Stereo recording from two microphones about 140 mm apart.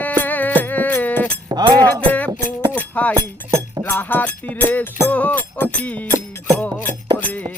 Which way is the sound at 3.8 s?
15° left (ahead or behind).